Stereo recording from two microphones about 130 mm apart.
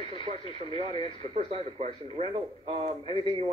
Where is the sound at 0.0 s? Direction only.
45° right (ahead or behind).